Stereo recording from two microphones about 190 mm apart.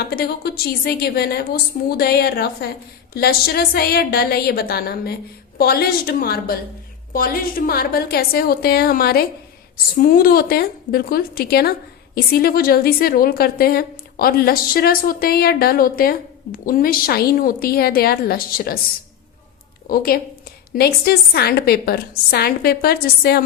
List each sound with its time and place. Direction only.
0.0 s a woman's voice: 55° left (ahead or behind)
19.9 s a woman's voice: 50° left (ahead or behind)